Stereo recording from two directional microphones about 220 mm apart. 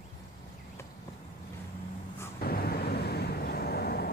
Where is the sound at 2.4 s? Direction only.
45° left (ahead or behind).